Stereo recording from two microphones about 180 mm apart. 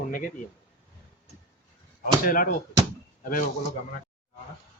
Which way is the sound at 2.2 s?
50° left (ahead or behind).